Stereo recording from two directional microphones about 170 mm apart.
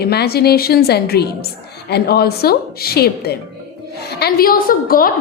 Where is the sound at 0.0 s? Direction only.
70° left (ahead or behind).